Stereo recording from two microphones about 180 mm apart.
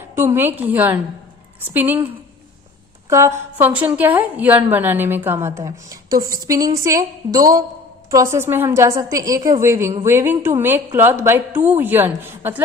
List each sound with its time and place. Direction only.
0.2 s a woman's voice: 10° right (ahead or behind)
3.1 s a woman's voice: 15° right (ahead or behind)